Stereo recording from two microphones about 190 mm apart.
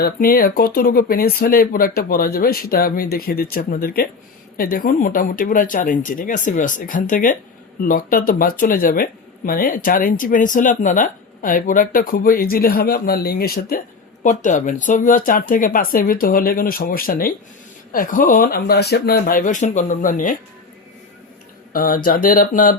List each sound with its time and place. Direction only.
0.0 s speech: 50° left (ahead or behind)
21.7 s speech: 50° left (ahead or behind)